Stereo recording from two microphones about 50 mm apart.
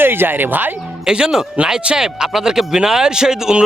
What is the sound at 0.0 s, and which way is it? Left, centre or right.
Speech, right.